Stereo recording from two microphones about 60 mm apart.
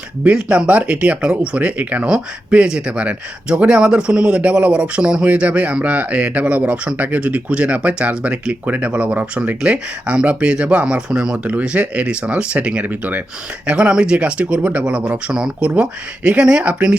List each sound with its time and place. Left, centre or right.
0.4 s speech: centre
13.7 s speech: centre